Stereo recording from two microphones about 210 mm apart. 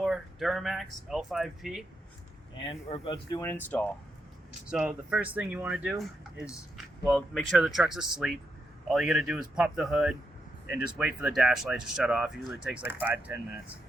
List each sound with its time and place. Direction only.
0.0 s speech: centre (ahead or behind)
2.6 s speech: 25° left (ahead or behind)
4.7 s speech: 5° right (ahead or behind)